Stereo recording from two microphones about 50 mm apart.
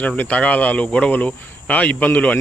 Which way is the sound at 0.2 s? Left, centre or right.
Left.